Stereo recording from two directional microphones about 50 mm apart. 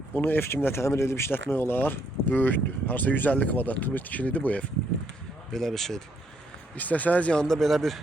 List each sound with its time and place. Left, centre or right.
0.1 s speech: left
0.4 s speech: left
5.5 s speech: centre
6.7 s speech: left
7.4 s speech: centre